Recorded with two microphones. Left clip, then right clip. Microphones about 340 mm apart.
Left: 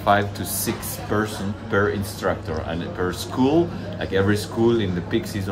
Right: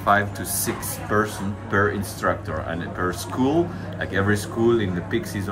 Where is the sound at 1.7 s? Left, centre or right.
Centre.